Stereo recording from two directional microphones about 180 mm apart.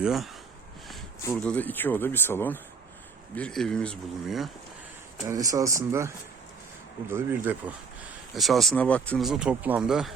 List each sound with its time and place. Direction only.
0.0 s speech: centre (ahead or behind)
1.2 s speech: 10° left (ahead or behind)
5.3 s speech: 20° right (ahead or behind)
7.1 s speech: 10° right (ahead or behind)
8.0 s speech: centre (ahead or behind)